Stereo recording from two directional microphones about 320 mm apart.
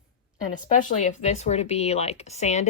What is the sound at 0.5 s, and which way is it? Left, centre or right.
Speech, left.